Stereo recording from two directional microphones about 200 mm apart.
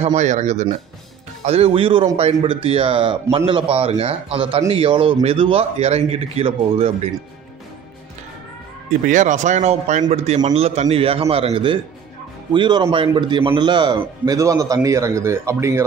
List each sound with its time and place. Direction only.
0.0 s a man's voice: 35° right (ahead or behind)
9.0 s a man's voice: 40° right (ahead or behind); by 15.8 s 15° right (ahead or behind)